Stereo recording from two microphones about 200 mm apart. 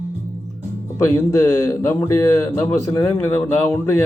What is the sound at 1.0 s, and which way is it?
A man's voice, 15° left (ahead or behind).